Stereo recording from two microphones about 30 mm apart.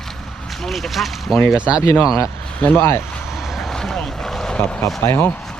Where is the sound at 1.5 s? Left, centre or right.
Right.